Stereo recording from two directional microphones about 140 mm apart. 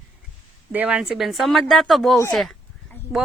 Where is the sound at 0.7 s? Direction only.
10° right (ahead or behind).